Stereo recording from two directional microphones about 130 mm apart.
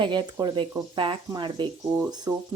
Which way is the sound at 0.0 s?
35° right (ahead or behind).